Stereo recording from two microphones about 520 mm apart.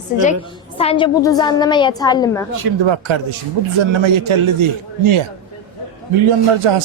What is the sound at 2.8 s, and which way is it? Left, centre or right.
A man's voice, right.